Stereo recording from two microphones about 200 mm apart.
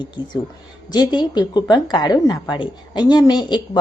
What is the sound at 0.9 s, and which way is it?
Speech, 20° left (ahead or behind).